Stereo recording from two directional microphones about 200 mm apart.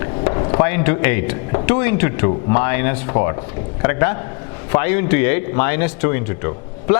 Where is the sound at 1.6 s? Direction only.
10° left (ahead or behind).